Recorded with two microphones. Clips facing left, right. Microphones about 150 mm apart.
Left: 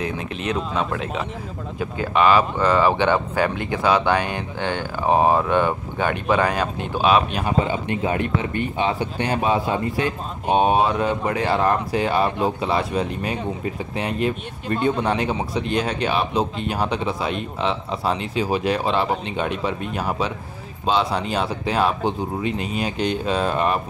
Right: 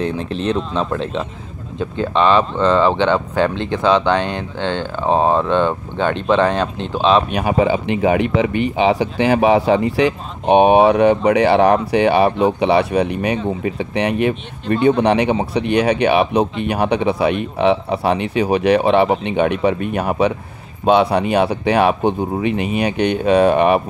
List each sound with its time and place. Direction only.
0.5 s speech: 5° left (ahead or behind)
7.2 s speech: 70° right (ahead or behind)